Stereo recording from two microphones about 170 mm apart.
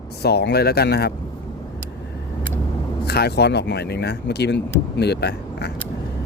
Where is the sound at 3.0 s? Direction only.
70° left (ahead or behind).